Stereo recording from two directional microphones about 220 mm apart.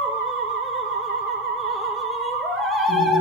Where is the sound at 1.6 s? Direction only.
Centre (ahead or behind).